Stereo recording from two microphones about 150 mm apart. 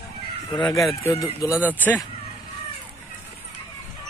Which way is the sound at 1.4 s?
10° right (ahead or behind).